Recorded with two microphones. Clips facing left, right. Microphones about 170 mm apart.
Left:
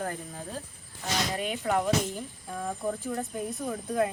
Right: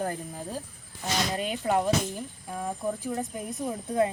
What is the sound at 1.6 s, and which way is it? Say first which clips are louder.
Speech: right 2 dB; 20° right (ahead or behind).